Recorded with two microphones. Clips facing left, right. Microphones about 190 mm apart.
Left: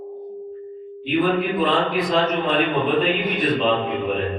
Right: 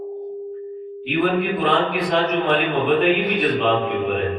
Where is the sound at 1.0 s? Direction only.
65° right (ahead or behind).